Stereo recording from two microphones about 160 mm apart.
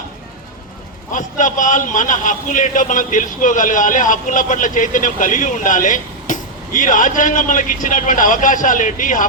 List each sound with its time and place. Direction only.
1.1 s a man's voice: 55° left (ahead or behind)